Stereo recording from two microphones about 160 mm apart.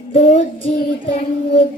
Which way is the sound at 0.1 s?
45° left (ahead or behind).